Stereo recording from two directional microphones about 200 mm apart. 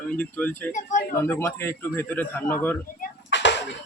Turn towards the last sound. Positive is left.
turn(degrees=60)  # may be behind; listen again after turning